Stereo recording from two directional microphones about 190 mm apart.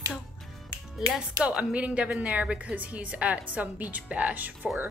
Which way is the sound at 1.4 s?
5° right (ahead or behind).